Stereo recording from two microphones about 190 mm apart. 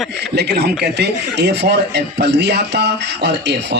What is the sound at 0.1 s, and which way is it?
Speech, 60° right (ahead or behind).